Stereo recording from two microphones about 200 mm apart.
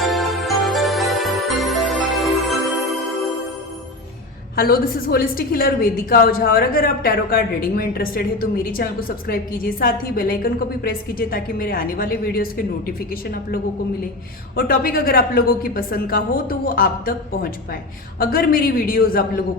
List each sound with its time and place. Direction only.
0.0 s music: centre (ahead or behind)
4.5 s a woman's voice: 45° left (ahead or behind)